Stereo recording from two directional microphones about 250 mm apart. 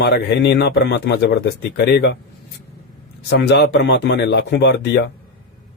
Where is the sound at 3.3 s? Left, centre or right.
Left.